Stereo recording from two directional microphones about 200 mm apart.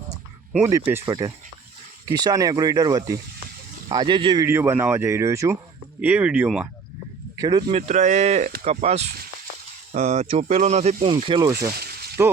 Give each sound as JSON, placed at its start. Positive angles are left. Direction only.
{"t": 0.5, "sound": "speech", "side_deg": -10}
{"t": 4.4, "sound": "speech", "side_deg": -10}
{"t": 7.3, "sound": "speech", "side_deg": -20}
{"t": 11.7, "sound": "squish", "side_deg": -50}
{"t": 12.2, "sound": "speech", "side_deg": -15}